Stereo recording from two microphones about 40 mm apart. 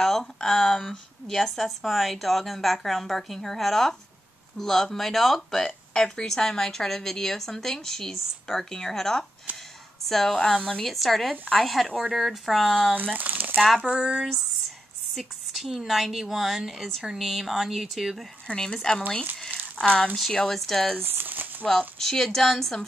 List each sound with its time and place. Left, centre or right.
0.5 s speech: centre
5.9 s a woman's voice: centre
9.5 s speech: right
10.0 s a woman's voice: centre
12.9 s speech: right
13.7 s speech: right
15.1 s speech: centre
18.6 s speech: centre
20.3 s a woman's voice: centre
21.0 s crumpling: right
21.6 s a woman's voice: centre